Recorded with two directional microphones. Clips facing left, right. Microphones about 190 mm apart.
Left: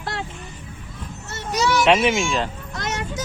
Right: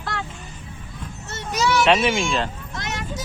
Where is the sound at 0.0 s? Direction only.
25° left (ahead or behind).